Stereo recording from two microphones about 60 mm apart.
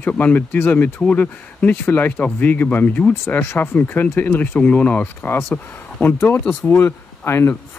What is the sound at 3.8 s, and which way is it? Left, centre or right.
Speech, left.